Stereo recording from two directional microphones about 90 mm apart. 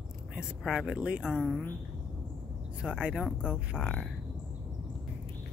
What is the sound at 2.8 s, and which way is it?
Speech, 10° right (ahead or behind).